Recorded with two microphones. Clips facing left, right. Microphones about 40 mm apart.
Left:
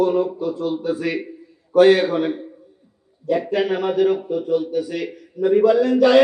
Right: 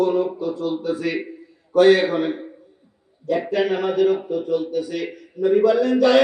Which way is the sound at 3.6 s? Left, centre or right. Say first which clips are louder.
Right 2 dB; centre.